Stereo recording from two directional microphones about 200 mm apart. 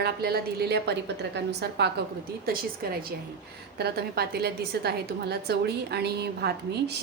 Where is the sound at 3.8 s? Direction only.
50° right (ahead or behind).